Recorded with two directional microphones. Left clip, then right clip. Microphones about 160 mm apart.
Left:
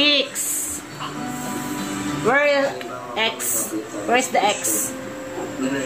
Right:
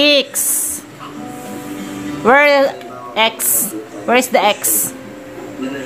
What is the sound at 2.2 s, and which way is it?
A woman's voice, 55° right (ahead or behind).